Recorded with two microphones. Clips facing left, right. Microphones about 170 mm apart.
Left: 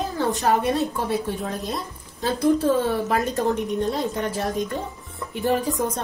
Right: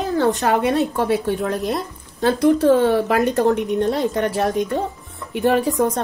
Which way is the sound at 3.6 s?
20° right (ahead or behind).